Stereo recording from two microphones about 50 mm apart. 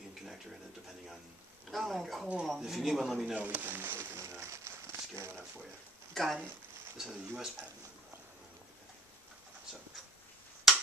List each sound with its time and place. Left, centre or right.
0.1 s a sound: centre
1.7 s a man's voice: centre
3.3 s speech: right
4.2 s crumpling: right
6.1 s speech: centre
7.0 s speech: centre
10.7 s finger snapping: centre